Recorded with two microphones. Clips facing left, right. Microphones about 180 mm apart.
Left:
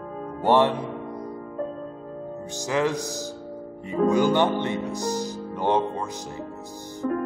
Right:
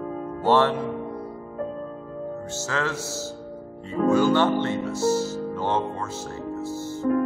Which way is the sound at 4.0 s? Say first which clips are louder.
Right 1 dB; 15° left (ahead or behind).